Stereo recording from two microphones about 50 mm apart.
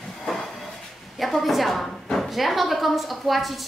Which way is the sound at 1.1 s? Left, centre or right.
Centre.